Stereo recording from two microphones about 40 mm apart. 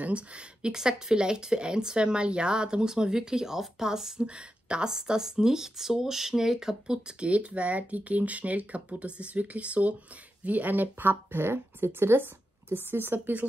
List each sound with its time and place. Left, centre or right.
0.0 s speech: right
0.7 s speech: centre
6.9 s speech: right
7.2 s speech: right
11.4 s speech: right
12.6 s a woman's voice: right